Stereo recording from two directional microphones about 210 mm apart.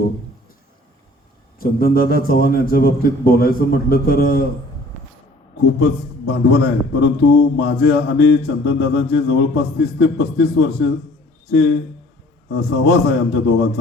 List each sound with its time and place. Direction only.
1.5 s a man's voice: 45° left (ahead or behind)
5.8 s a man's voice: 55° left (ahead or behind)
12.5 s a man's voice: 55° left (ahead or behind)